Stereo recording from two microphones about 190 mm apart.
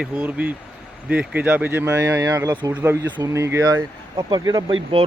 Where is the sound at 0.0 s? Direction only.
10° right (ahead or behind).